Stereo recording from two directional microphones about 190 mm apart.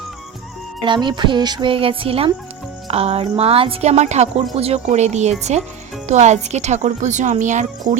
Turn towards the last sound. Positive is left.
turn(degrees=-40)  # may be behind; listen again after turning